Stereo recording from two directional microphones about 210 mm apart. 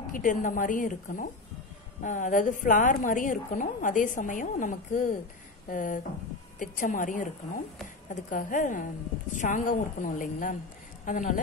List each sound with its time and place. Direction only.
0.1 s a woman's voice: 40° left (ahead or behind)